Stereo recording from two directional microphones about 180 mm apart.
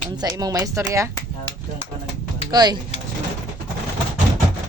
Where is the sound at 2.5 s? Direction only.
20° right (ahead or behind).